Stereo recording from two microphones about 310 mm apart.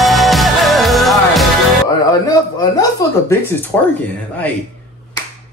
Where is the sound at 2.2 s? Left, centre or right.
Centre.